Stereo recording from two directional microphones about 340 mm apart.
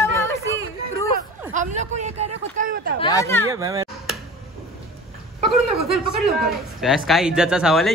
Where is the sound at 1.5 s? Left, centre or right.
Right.